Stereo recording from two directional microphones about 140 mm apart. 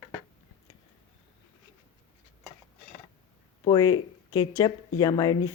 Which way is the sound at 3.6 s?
30° left (ahead or behind).